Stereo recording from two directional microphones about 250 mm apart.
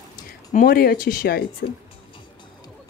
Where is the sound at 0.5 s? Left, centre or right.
Left.